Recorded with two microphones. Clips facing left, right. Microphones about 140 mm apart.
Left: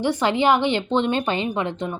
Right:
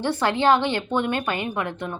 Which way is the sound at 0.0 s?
15° left (ahead or behind).